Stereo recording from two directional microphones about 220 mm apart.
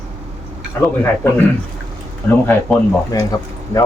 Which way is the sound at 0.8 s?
10° left (ahead or behind).